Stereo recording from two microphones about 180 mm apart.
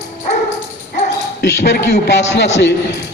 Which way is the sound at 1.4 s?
75° left (ahead or behind).